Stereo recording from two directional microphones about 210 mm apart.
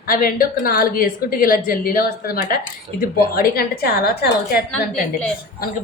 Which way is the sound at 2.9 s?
30° right (ahead or behind).